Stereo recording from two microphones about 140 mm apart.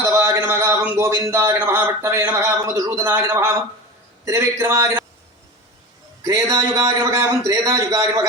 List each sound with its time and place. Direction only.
0.0 s a man's voice: 20° right (ahead or behind)
6.2 s a man's voice: 25° right (ahead or behind)